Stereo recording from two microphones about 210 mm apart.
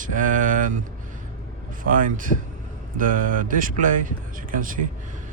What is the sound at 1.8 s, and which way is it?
Speech, 40° right (ahead or behind).